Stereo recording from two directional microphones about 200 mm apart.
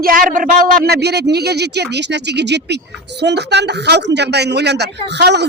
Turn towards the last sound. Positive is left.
turn(degrees=-55)  # may be behind; listen again after turning